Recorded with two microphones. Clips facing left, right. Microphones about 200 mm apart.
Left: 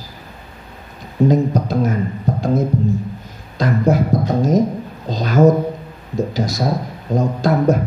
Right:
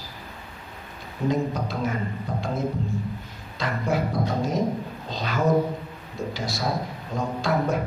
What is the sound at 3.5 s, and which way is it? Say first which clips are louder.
Speech: left 12 dB; 40° left (ahead or behind).